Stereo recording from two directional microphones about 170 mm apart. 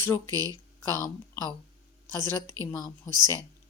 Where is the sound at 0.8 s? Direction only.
15° left (ahead or behind).